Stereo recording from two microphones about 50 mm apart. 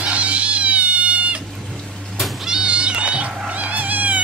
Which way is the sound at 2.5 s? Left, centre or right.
Right.